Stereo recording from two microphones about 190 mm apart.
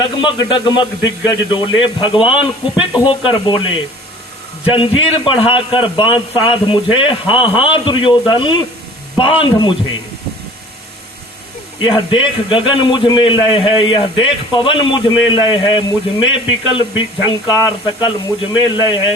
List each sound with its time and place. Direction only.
0.2 s a man's voice: 25° left (ahead or behind)
4.6 s a man's voice: 30° left (ahead or behind)
11.8 s a man's voice: 25° left (ahead or behind)